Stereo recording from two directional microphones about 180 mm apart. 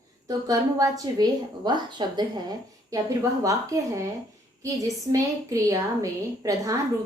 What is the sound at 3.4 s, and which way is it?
A woman's voice, 20° right (ahead or behind).